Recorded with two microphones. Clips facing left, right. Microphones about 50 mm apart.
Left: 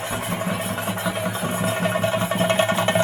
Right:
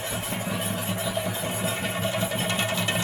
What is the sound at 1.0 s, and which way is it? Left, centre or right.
Music, left.